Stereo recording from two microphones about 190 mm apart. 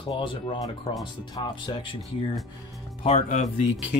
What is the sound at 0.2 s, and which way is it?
Speech, 25° left (ahead or behind).